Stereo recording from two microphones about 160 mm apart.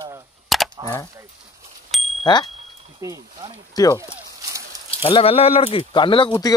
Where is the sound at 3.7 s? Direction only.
25° left (ahead or behind).